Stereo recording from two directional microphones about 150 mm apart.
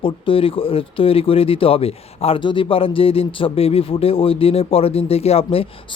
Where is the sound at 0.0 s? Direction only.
35° left (ahead or behind).